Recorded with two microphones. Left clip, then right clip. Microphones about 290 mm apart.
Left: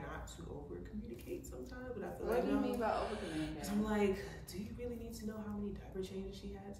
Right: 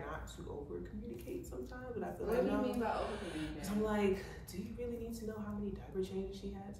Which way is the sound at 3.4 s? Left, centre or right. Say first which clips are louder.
Right 2 dB; centre.